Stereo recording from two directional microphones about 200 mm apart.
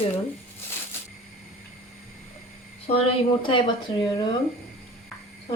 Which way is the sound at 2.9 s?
30° left (ahead or behind).